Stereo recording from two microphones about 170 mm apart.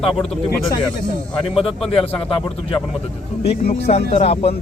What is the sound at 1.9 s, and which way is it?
Speech, 35° left (ahead or behind).